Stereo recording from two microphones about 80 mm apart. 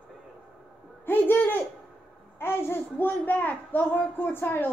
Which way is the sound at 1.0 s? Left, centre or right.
Left.